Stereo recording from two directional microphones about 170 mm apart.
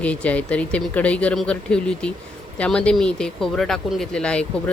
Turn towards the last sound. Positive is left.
turn(degrees=5)  # may be behind; listen again after turning